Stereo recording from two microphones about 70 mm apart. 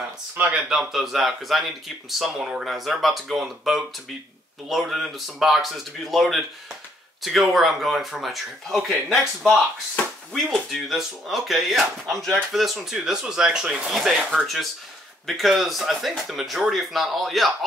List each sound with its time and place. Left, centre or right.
0.5 s speech: centre
10.3 s speech: centre